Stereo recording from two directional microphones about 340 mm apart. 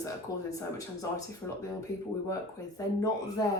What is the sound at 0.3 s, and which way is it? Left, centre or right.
Speech, centre.